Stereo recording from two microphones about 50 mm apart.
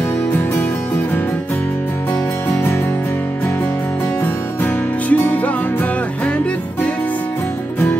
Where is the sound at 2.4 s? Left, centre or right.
Left.